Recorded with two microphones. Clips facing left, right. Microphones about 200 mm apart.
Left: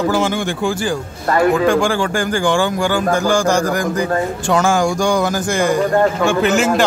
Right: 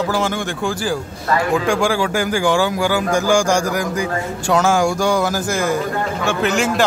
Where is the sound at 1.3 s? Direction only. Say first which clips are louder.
Left 3 dB; 50° left (ahead or behind).